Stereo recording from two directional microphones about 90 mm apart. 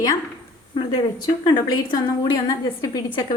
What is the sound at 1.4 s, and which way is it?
Speech, 55° left (ahead or behind).